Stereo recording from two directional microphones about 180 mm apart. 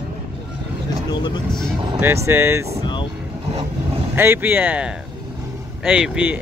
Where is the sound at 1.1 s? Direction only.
25° left (ahead or behind).